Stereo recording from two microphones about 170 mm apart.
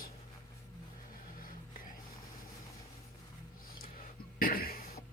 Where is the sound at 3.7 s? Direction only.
60° left (ahead or behind).